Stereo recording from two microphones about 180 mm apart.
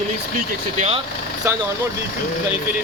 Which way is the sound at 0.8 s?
35° right (ahead or behind).